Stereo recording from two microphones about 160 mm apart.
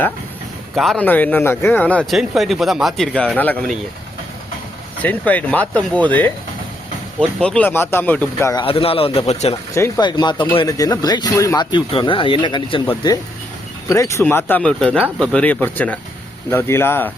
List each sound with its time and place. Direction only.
0.8 s speech: centre (ahead or behind)
1.0 s speech: 10° left (ahead or behind)
5.0 s speech: 10° left (ahead or behind)
8.6 s a man's voice: 35° left (ahead or behind)
10.0 s speech: 25° left (ahead or behind)
13.9 s speech: 20° left (ahead or behind)